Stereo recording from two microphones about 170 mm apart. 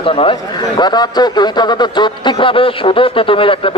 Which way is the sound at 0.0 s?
30° left (ahead or behind).